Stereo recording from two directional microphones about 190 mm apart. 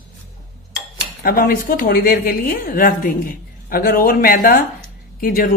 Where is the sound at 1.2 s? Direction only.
50° left (ahead or behind).